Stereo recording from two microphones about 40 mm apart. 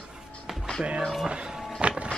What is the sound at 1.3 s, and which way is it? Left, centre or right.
Music, right.